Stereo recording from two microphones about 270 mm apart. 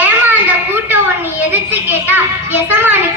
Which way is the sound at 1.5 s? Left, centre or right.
Centre.